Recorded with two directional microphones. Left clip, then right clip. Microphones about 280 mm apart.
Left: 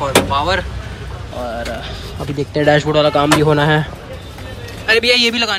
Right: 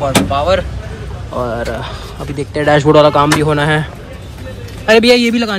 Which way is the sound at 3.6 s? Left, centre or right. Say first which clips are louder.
Right 1 dB; right.